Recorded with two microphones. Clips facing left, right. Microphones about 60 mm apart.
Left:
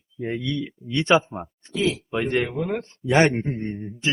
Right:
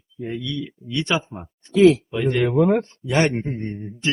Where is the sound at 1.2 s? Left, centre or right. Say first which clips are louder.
Left 4 dB; centre.